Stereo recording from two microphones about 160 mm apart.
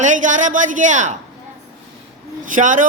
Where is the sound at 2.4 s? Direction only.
55° right (ahead or behind).